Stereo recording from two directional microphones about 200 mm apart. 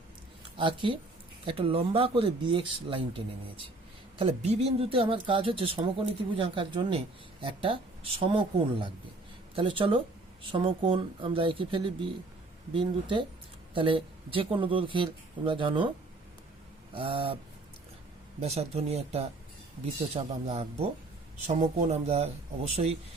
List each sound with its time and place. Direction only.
0.5 s speech: 25° right (ahead or behind)
16.9 s speech: 30° right (ahead or behind)
18.3 s speech: 30° right (ahead or behind)